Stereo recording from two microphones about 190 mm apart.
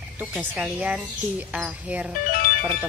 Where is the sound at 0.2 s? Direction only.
5° right (ahead or behind).